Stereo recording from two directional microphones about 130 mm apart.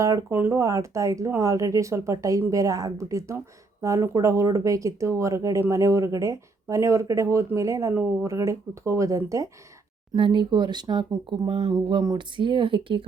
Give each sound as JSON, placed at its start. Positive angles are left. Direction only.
{"t": 0.0, "sound": "speech", "side_deg": -25}
{"t": 10.2, "sound": "speech", "side_deg": -40}